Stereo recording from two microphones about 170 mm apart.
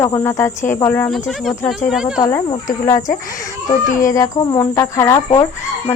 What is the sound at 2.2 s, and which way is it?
Speech, 15° left (ahead or behind).